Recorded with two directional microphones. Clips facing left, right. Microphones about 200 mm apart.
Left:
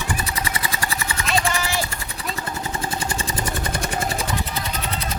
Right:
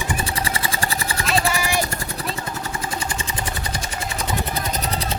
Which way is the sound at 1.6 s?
15° right (ahead or behind).